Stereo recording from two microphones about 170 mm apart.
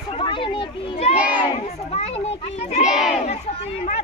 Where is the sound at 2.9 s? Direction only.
Centre (ahead or behind).